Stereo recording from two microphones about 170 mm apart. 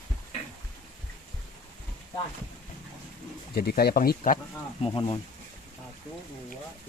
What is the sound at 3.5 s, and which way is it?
Speech, 65° left (ahead or behind).